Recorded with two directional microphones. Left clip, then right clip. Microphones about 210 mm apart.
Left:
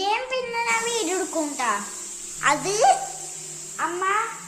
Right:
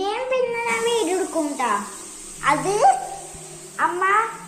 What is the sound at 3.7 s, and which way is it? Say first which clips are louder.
Speech: right 5 dB; 15° left (ahead or behind).